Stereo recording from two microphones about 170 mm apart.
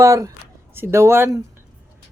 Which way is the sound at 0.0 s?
15° right (ahead or behind).